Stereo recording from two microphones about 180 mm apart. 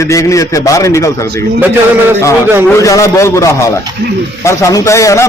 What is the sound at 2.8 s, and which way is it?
A man's voice, 15° left (ahead or behind).